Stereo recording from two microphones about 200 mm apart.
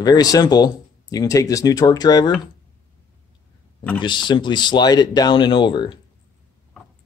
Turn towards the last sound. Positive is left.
turn(degrees=25)  # may be behind; listen again after turning